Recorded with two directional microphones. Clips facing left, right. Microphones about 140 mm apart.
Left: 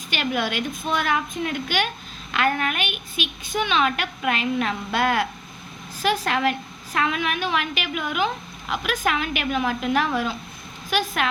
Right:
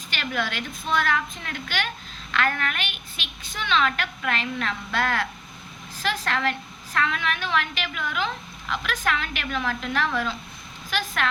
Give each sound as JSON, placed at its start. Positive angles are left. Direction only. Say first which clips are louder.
{"t": 0.1, "sound": "a woman's voice", "louder": "left 4 dB", "side_deg": 15}